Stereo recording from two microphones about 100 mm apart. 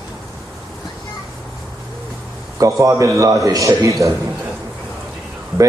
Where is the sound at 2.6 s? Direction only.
30° right (ahead or behind).